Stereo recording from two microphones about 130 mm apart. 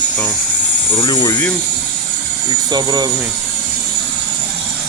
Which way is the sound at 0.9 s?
35° left (ahead or behind).